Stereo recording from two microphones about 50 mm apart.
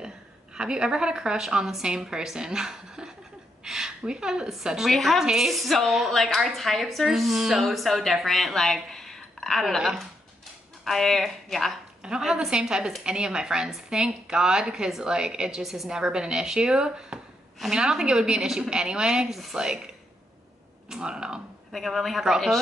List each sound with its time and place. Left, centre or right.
0.6 s a woman's voice: centre
4.9 s speech: centre
5.2 s speech: centre
8.9 s a sound: centre
10.9 s speech: centre
12.0 s a woman's voice: centre
15.6 s a woman's voice: centre
19.2 s speech: centre
20.9 s a woman's voice: centre
21.7 s speech: centre